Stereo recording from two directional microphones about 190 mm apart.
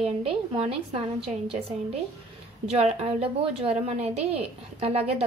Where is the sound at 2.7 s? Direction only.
35° right (ahead or behind).